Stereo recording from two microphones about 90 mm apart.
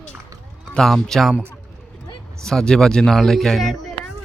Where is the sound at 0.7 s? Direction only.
5° left (ahead or behind).